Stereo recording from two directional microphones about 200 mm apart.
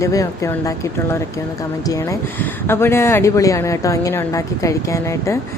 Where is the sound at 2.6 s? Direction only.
10° left (ahead or behind).